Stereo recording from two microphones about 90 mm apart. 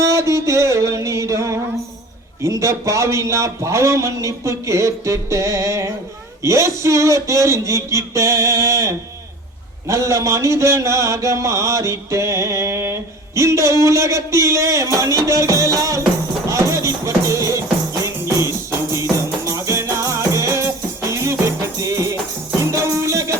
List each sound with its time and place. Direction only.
0.0 s music: 35° right (ahead or behind)
2.4 s a sound: 35° right (ahead or behind)
16.5 s music: 35° right (ahead or behind)